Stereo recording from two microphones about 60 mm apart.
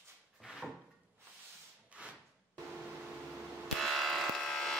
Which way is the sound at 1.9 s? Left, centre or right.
Right.